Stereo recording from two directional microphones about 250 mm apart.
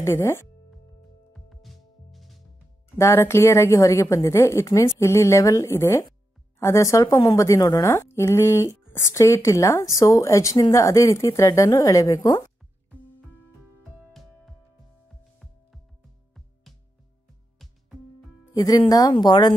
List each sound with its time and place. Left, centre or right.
0.0 s a woman's voice: centre
1.3 s music: centre
3.0 s a woman's voice: centre
18.5 s a woman's voice: centre